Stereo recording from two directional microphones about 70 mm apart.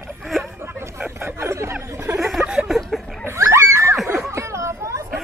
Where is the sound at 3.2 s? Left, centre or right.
Right.